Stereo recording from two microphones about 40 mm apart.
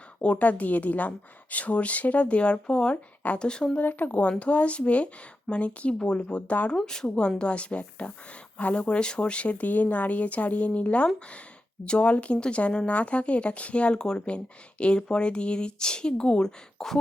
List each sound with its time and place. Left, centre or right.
0.2 s a woman's voice: left
3.8 s speech: left
4.1 s a woman's voice: left
6.8 s a woman's voice: centre